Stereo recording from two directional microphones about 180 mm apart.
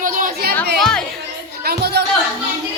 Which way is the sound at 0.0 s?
50° right (ahead or behind).